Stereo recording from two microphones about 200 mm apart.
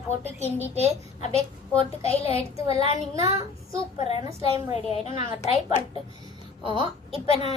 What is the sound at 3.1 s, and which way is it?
Speech, 15° right (ahead or behind).